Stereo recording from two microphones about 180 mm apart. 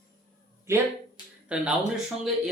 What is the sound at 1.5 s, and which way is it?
Speech, 5° right (ahead or behind).